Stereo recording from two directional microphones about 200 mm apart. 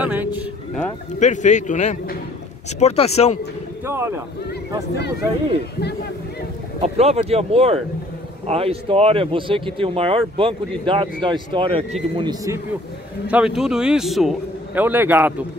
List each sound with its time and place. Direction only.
0.0 s speech: 10° right (ahead or behind)
1.2 s a man's voice: 35° left (ahead or behind)
3.8 s speech: 15° right (ahead or behind)
6.8 s speech: 30° right (ahead or behind)
13.3 s a man's voice: 5° right (ahead or behind)